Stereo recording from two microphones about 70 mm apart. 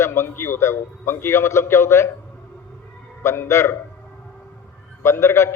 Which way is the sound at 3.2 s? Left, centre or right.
Left.